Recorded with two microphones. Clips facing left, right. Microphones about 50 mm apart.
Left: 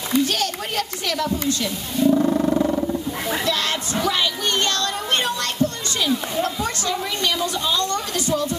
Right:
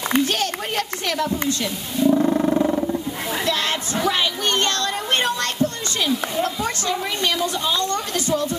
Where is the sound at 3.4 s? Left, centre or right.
Centre.